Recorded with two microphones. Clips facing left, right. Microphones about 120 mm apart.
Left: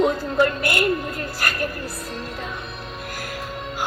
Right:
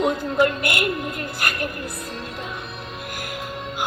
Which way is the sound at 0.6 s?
30° left (ahead or behind).